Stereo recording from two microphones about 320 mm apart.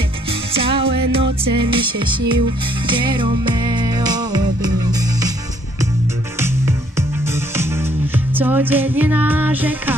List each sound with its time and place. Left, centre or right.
0.3 s music: centre
6.4 s music: centre